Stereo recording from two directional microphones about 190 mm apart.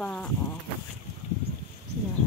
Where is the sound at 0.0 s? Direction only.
5° left (ahead or behind).